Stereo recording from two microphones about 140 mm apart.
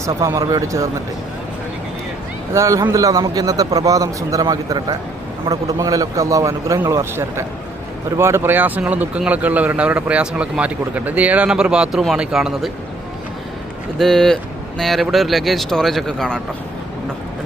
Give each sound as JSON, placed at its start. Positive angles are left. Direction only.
{"t": 0.2, "sound": "a man's voice", "side_deg": -25}
{"t": 2.5, "sound": "a man's voice", "side_deg": -20}
{"t": 14.0, "sound": "speech", "side_deg": 5}